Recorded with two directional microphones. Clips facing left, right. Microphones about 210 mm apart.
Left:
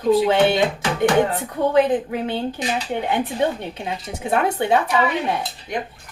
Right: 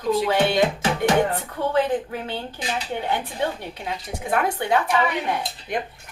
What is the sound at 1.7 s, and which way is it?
Speech, 20° left (ahead or behind).